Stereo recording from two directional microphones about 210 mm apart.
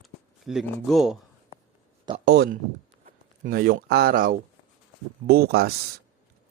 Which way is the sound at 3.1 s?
40° right (ahead or behind).